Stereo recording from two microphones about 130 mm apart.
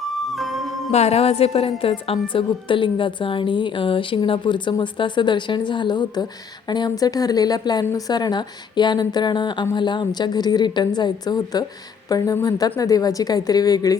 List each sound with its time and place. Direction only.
0.0 s music: centre (ahead or behind)
0.9 s a woman's voice: 55° left (ahead or behind); by 14.0 s 30° left (ahead or behind)